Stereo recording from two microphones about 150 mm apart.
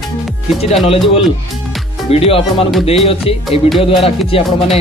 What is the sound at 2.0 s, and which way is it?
A man's voice, 40° left (ahead or behind).